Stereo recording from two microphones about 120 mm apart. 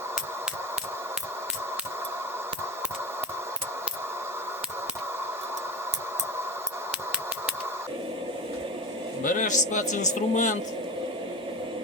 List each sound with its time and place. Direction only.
9.2 s a man's voice: 90° left